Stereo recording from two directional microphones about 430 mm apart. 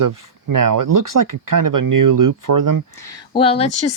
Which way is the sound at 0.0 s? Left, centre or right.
Right.